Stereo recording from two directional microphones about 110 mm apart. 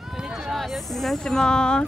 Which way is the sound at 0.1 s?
5° right (ahead or behind).